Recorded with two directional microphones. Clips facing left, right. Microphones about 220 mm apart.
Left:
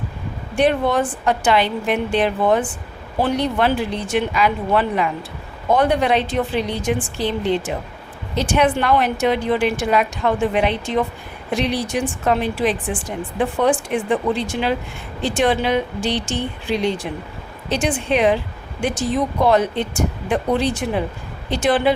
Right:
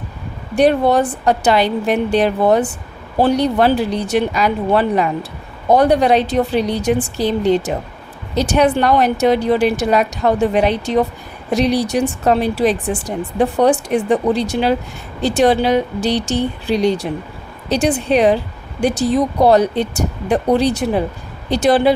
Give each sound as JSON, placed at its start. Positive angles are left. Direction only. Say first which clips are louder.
{"t": 0.5, "sound": "speech", "louder": "right 4 dB", "side_deg": -40}